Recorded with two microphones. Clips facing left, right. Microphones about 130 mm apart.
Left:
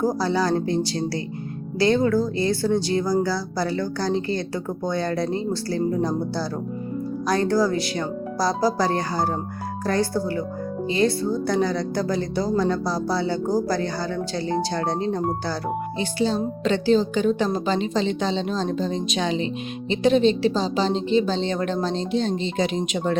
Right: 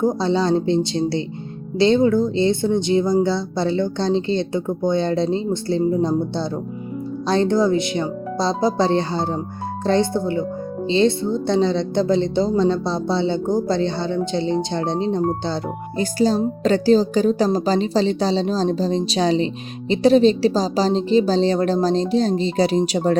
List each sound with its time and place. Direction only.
0.2 s a woman's voice: 25° right (ahead or behind)
16.0 s speech: 40° right (ahead or behind)